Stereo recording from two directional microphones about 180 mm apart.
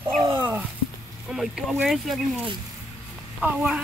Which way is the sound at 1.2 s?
Centre (ahead or behind).